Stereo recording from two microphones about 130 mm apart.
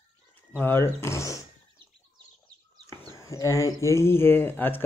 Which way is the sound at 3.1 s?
25° left (ahead or behind).